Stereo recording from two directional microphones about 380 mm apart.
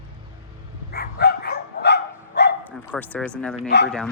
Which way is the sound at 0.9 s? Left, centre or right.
Left.